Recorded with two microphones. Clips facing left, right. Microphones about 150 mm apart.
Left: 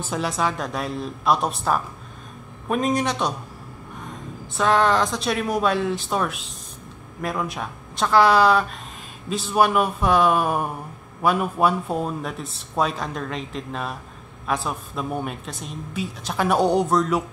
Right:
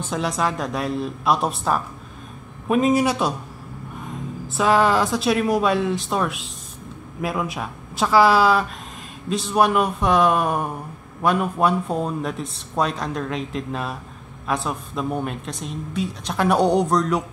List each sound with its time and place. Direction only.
0.0 s speech: centre (ahead or behind)
4.6 s speech: 5° right (ahead or behind)